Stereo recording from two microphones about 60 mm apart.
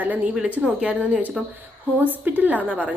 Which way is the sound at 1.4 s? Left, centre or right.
Centre.